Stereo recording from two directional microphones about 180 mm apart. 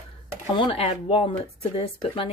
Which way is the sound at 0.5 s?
30° left (ahead or behind).